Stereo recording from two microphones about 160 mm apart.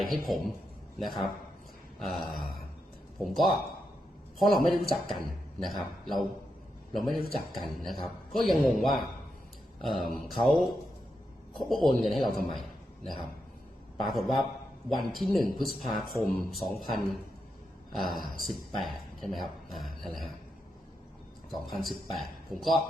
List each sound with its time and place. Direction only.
0.0 s speech: centre (ahead or behind)
14.0 s speech: centre (ahead or behind)
17.9 s speech: centre (ahead or behind)
21.5 s speech: centre (ahead or behind)